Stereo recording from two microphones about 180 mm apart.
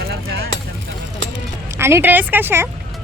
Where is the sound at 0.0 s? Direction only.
60° right (ahead or behind).